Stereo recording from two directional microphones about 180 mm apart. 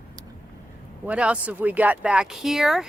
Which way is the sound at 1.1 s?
5° right (ahead or behind).